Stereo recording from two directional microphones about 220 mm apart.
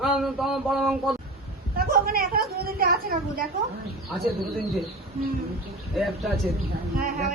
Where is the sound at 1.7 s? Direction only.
45° right (ahead or behind).